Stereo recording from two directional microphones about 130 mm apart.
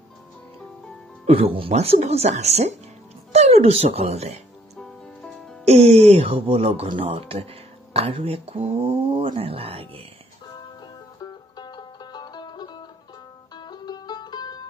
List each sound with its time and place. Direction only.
1.2 s speech: 50° right (ahead or behind)
1.7 s speech: 60° right (ahead or behind)
4.7 s music: 5° left (ahead or behind)
5.7 s speech: 55° right (ahead or behind)
11.1 s music: 30° left (ahead or behind)